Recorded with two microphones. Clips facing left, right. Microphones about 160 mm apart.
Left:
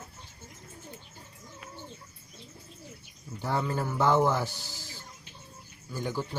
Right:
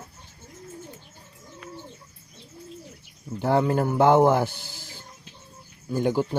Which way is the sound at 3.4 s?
60° right (ahead or behind).